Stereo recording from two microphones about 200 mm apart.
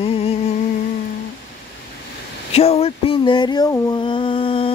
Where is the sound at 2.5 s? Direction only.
30° left (ahead or behind).